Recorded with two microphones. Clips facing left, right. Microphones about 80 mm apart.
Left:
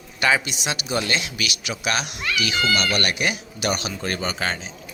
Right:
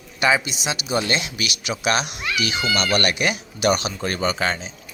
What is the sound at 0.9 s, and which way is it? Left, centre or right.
Speech, right.